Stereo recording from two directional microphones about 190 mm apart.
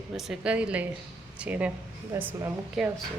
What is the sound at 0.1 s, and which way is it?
A woman's voice, 5° right (ahead or behind).